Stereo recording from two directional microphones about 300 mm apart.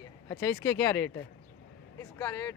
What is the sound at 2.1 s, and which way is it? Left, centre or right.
Speech, centre.